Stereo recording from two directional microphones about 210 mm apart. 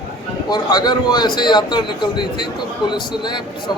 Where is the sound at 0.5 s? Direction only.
20° left (ahead or behind).